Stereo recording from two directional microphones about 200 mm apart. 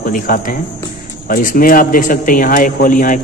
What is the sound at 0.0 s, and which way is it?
A man's voice, 45° left (ahead or behind).